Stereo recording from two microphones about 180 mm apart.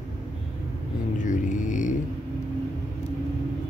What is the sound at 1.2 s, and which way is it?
Music, 45° left (ahead or behind).